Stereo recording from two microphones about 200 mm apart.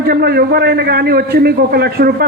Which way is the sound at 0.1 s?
50° right (ahead or behind).